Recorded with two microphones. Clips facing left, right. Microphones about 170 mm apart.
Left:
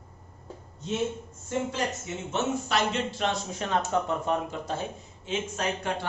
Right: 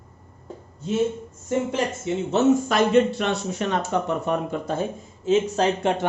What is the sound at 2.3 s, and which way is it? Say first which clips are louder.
Speech: right 9 dB; 50° right (ahead or behind).